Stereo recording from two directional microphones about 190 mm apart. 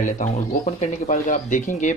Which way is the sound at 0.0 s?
40° left (ahead or behind).